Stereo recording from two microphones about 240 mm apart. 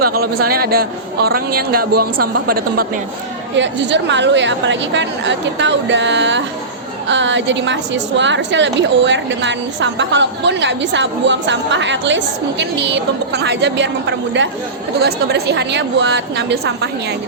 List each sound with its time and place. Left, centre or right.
0.0 s a man's voice: right
3.5 s a woman's voice: right